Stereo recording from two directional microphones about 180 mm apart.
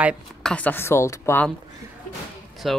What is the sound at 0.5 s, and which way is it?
Speech, 10° left (ahead or behind).